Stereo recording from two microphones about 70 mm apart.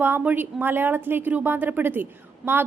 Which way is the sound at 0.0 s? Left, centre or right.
Right.